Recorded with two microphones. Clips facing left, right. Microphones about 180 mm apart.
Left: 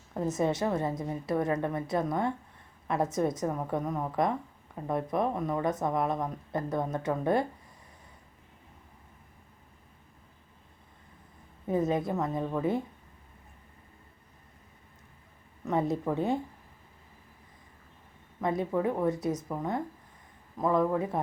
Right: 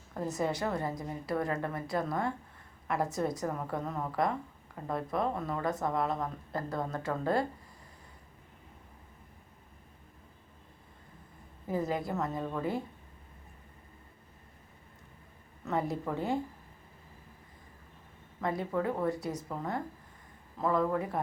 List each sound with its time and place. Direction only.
0.1 s a woman's voice: 20° left (ahead or behind)
11.7 s a woman's voice: 20° left (ahead or behind)
15.6 s a woman's voice: 20° left (ahead or behind)
18.3 s a woman's voice: 20° left (ahead or behind)